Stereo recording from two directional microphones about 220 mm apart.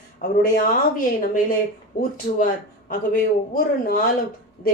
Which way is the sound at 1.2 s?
40° left (ahead or behind).